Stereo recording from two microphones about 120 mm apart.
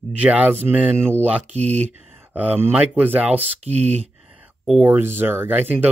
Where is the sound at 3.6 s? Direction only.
65° right (ahead or behind).